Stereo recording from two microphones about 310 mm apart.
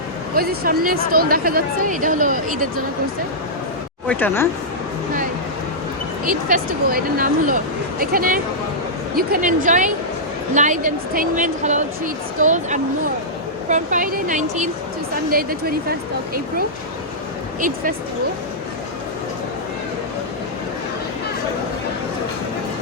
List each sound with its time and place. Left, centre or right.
0.3 s speech: right
4.0 s speech: centre
6.2 s speech: right